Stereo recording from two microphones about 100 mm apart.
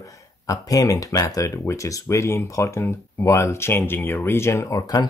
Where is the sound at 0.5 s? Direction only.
35° left (ahead or behind).